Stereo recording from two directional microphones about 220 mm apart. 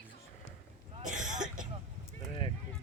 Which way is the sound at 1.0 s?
35° right (ahead or behind).